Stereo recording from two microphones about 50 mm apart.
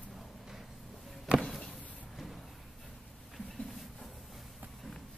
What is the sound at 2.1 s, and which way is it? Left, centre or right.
Vehicle, centre.